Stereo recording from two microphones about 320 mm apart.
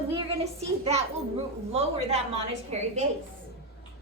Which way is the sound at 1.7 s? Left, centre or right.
Centre.